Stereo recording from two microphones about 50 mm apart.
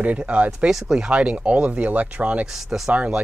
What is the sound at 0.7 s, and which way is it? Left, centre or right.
Speech, centre.